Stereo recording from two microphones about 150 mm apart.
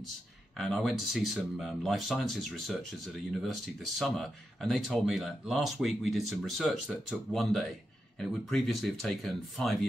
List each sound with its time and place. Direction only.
0.6 s speech: centre (ahead or behind)